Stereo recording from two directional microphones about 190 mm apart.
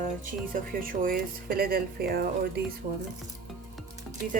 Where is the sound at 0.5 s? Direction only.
45° right (ahead or behind).